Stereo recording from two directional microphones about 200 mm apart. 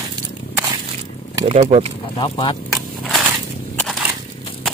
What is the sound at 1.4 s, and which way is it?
Speech, 30° right (ahead or behind).